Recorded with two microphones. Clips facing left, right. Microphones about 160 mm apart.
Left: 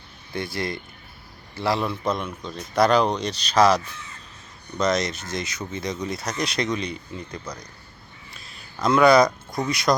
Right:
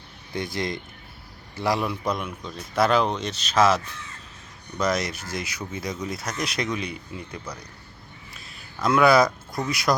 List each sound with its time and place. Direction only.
0.3 s a man's voice: 15° right (ahead or behind); by 3.8 s centre (ahead or behind)
4.8 s speech: 5° right (ahead or behind)